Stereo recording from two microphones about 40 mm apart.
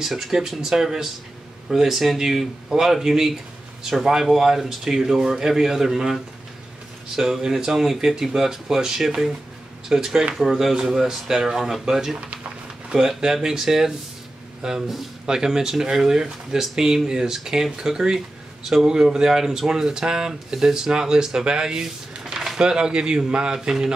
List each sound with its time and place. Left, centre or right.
0.0 s speech: centre
22.6 s speech: centre